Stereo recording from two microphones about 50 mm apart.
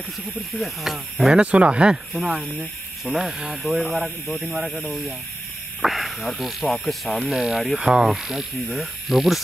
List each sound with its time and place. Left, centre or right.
0.5 s speech: centre
1.4 s speech: right
2.1 s speech: centre